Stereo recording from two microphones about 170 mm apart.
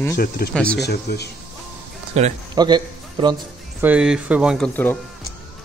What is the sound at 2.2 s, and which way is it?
Speech, 40° right (ahead or behind).